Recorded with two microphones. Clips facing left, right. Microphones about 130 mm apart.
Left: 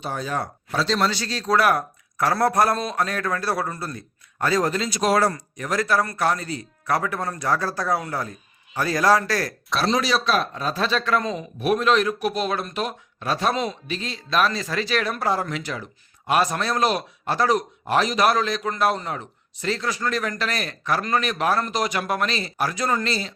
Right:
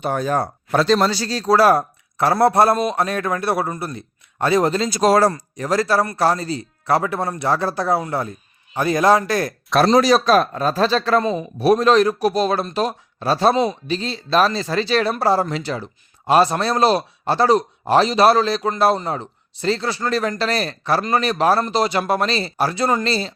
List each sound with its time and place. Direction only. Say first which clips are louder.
0.0 s speech: right 7 dB; 55° right (ahead or behind)
0.7 s speech: right 8 dB; 55° right (ahead or behind)
0.9 s speech: right 4 dB; 35° right (ahead or behind)
4.9 s speech: right 6 dB; 40° right (ahead or behind); by 9.5 s 20° right (ahead or behind)
9.7 s speech: right 8 dB; 45° right (ahead or behind)